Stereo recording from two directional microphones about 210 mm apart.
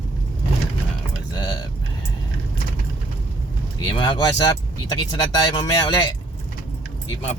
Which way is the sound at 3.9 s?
20° left (ahead or behind).